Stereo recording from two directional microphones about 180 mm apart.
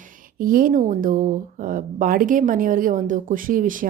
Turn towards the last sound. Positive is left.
turn(degrees=-50)  # may be behind; listen again after turning